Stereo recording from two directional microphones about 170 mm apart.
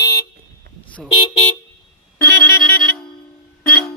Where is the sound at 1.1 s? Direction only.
35° left (ahead or behind).